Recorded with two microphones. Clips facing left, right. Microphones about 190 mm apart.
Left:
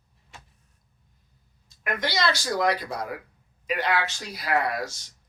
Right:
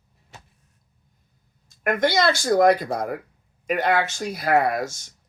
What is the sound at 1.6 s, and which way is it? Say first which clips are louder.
Speech: right 8 dB; 50° right (ahead or behind).